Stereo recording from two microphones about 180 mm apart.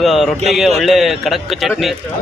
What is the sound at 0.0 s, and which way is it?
Speech, centre (ahead or behind).